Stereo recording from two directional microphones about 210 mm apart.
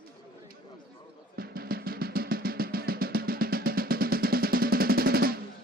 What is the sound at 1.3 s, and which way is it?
Drum, 45° right (ahead or behind).